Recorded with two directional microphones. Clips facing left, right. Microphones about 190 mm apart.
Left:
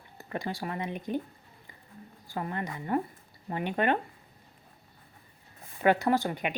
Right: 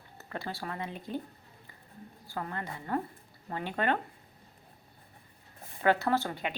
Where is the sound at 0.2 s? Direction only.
15° left (ahead or behind).